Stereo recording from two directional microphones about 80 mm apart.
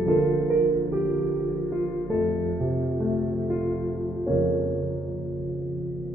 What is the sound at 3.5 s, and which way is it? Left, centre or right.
Music, centre.